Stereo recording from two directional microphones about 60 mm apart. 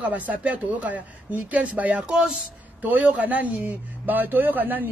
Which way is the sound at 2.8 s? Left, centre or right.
Right.